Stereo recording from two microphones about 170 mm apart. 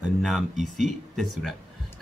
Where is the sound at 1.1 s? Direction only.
Centre (ahead or behind).